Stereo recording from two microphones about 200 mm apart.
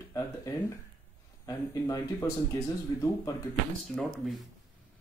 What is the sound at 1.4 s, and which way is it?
Speech, 15° left (ahead or behind).